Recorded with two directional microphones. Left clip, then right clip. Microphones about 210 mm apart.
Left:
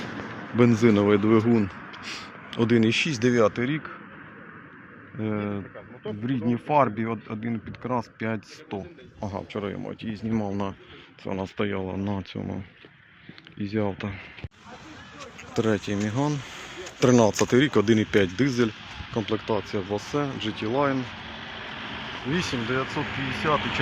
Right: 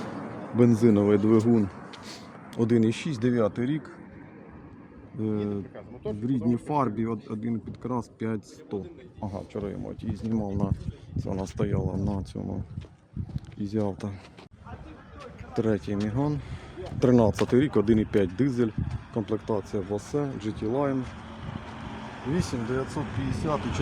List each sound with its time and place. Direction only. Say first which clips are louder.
0.5 s a man's voice: left 2 dB; 15° right (ahead or behind); by 3.9 s 5° left (ahead or behind)
5.3 s a man's voice: left 1 dB; 15° left (ahead or behind)
13.6 s speech: left 2 dB; 10° right (ahead or behind)
15.5 s a man's voice: left 2 dB; 5° right (ahead or behind)
21.2 s vehicle: left 5 dB; 60° right (ahead or behind)
22.3 s a man's voice: left 3 dB; centre (ahead or behind)